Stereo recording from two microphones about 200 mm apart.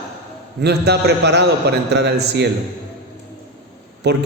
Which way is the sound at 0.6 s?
55° right (ahead or behind).